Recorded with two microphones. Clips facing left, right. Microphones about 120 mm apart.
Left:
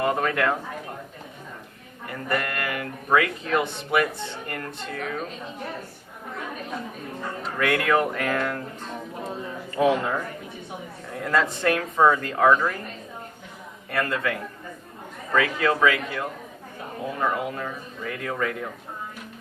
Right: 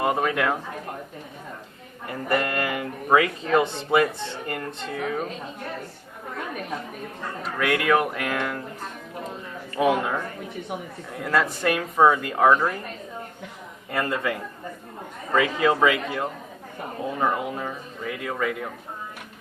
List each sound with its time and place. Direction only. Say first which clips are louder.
0.0 s speech: even; 15° right (ahead or behind)
2.0 s speech: right 3 dB; 25° right (ahead or behind)
7.6 s speech: even; 5° right (ahead or behind)
9.7 s speech: even; 5° right (ahead or behind)
13.9 s speech: even; 20° right (ahead or behind)